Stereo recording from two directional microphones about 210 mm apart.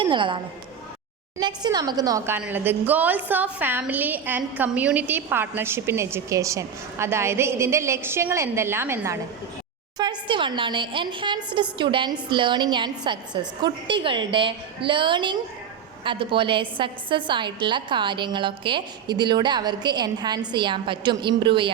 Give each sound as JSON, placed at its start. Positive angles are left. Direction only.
{"t": 0.0, "sound": "a woman's voice", "side_deg": -25}
{"t": 10.0, "sound": "a woman's voice", "side_deg": -20}